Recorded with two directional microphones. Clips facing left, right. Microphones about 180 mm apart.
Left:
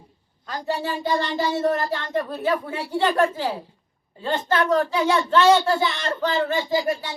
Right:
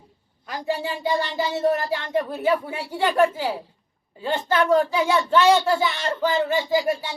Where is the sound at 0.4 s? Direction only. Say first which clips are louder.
Even; 10° right (ahead or behind).